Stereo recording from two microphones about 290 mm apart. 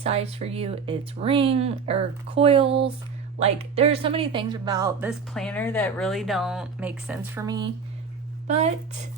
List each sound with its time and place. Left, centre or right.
0.0 s speech: right